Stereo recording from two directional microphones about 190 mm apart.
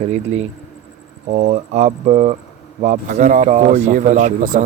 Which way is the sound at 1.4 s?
35° right (ahead or behind).